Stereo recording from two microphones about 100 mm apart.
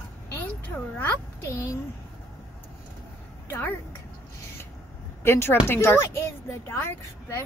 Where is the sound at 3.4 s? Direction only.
20° left (ahead or behind).